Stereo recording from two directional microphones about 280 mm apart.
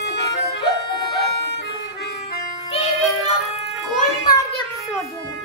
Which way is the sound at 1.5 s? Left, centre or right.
Left.